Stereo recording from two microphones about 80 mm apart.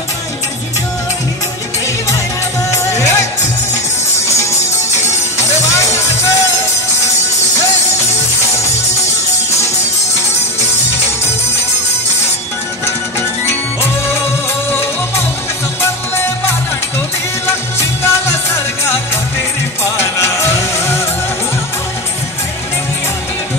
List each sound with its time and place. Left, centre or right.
2.7 s music: left
5.8 s music: left
14.7 s music: left
19.8 s music: left